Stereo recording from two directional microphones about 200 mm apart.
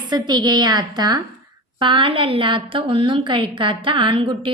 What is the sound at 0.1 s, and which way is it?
A woman's voice, 20° right (ahead or behind).